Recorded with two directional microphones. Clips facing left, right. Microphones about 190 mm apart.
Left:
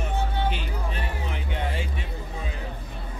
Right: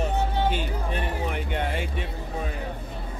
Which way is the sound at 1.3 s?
55° right (ahead or behind).